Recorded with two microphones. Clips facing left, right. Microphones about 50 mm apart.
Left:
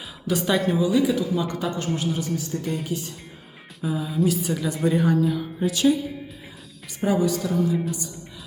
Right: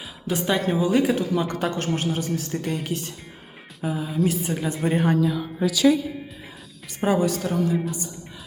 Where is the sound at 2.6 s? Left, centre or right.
Right.